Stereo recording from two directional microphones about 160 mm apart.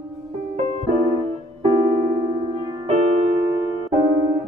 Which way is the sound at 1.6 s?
35° right (ahead or behind).